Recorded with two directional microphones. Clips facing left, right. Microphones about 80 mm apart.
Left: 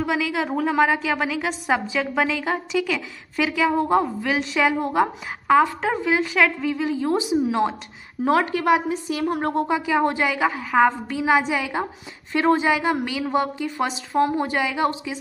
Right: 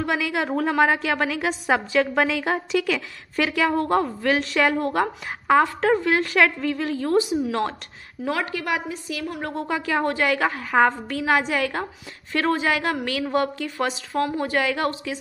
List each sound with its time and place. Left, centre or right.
0.0 s a woman's voice: centre
8.3 s a woman's voice: left
9.7 s a woman's voice: centre
12.3 s a woman's voice: centre